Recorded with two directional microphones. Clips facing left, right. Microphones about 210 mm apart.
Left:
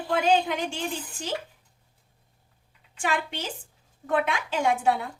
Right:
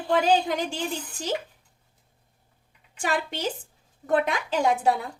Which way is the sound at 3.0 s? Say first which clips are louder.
Right 1 dB; 40° right (ahead or behind).